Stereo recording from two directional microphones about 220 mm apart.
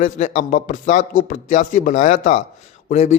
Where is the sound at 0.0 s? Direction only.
35° left (ahead or behind).